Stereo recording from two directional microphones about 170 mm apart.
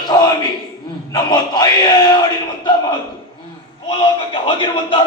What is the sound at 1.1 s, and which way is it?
Speech, 25° left (ahead or behind).